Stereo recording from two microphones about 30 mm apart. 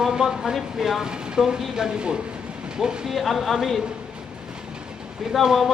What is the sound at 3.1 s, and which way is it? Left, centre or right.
Speech, centre.